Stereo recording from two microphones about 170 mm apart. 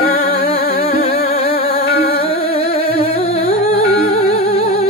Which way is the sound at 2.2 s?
35° left (ahead or behind).